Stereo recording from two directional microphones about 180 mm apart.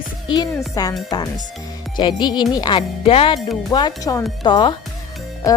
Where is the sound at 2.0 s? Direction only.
25° left (ahead or behind).